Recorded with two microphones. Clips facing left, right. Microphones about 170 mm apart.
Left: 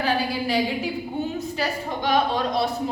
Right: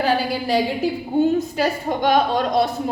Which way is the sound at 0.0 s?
40° right (ahead or behind).